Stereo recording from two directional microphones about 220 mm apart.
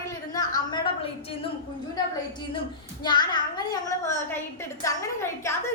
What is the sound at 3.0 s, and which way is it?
A woman's voice, 20° left (ahead or behind).